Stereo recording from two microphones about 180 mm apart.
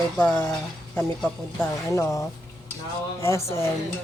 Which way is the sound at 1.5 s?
15° left (ahead or behind).